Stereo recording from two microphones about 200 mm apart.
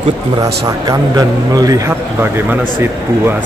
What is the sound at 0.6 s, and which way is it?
A man's voice, 15° right (ahead or behind).